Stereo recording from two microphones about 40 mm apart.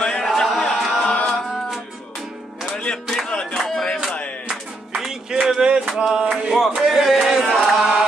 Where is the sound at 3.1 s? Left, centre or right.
Centre.